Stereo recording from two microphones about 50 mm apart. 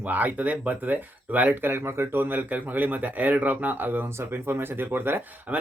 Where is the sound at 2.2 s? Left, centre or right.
Right.